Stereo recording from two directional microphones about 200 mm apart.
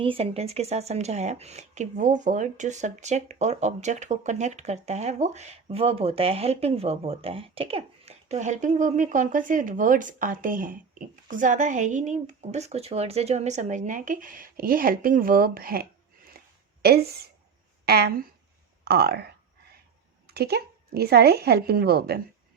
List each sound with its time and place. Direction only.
0.0 s speech: 30° right (ahead or behind); by 15.9 s 50° right (ahead or behind)
16.4 s a sound: 50° right (ahead or behind)
16.8 s a woman's voice: 50° right (ahead or behind)